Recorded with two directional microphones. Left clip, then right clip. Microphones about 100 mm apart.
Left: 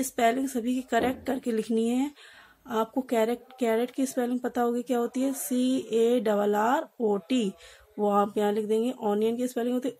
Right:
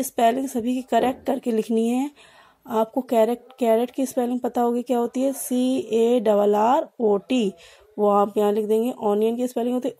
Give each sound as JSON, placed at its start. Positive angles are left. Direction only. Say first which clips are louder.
{"t": 0.0, "sound": "a woman's voice", "louder": "right 5 dB", "side_deg": -50}